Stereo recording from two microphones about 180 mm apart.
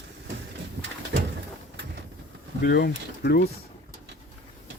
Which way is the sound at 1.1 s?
90° right.